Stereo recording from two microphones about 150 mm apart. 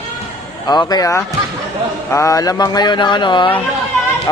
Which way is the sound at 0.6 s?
25° left (ahead or behind).